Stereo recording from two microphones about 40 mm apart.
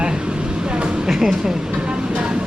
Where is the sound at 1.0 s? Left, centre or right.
Centre.